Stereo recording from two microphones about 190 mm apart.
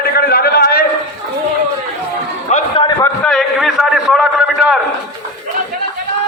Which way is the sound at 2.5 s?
40° left (ahead or behind).